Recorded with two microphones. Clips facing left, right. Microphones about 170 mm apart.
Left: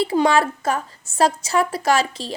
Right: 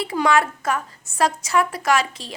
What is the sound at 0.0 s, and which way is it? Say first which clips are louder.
A woman's voice: left 2 dB; 30° left (ahead or behind).